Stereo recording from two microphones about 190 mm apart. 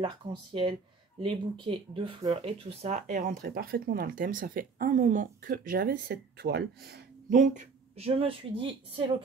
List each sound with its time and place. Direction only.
0.0 s speech: 25° right (ahead or behind)
3.4 s speech: 55° right (ahead or behind)
7.2 s speech: 40° right (ahead or behind)